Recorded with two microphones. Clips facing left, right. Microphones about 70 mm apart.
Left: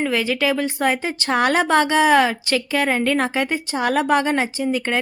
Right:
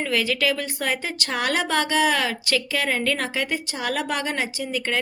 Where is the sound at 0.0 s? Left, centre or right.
Left.